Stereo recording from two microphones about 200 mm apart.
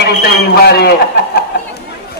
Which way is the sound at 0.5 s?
55° left (ahead or behind).